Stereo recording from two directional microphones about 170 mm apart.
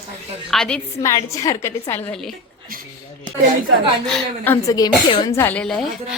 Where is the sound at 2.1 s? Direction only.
Centre (ahead or behind).